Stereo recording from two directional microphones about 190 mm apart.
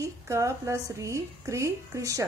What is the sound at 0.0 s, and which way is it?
A woman's voice, 15° right (ahead or behind).